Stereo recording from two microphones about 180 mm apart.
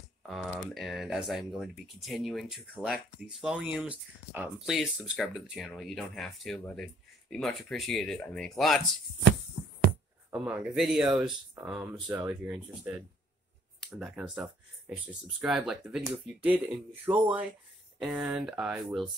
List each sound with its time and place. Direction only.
0.3 s speech: centre (ahead or behind)
10.3 s speech: 5° right (ahead or behind)